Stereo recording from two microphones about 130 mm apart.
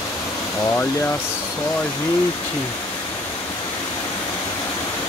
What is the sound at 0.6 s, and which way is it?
Speech, 15° left (ahead or behind).